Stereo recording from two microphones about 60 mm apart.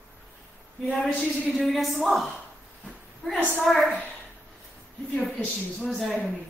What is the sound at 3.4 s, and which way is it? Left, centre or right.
Speech, right.